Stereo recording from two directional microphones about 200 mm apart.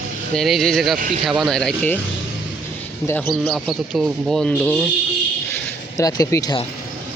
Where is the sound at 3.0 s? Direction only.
10° left (ahead or behind).